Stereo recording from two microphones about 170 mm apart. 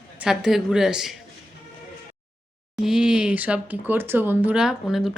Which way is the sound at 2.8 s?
5° right (ahead or behind).